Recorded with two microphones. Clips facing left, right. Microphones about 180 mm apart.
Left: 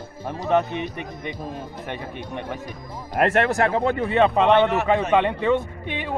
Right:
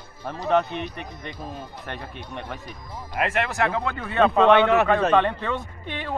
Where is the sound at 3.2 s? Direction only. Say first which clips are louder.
Left 5 dB; 40° left (ahead or behind).